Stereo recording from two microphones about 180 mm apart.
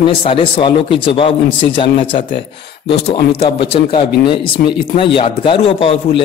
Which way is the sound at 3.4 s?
30° left (ahead or behind).